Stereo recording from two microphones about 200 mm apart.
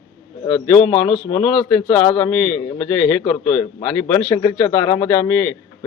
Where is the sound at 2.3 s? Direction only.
5° left (ahead or behind).